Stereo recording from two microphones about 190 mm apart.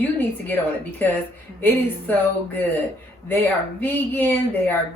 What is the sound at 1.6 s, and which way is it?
Speech, 10° left (ahead or behind).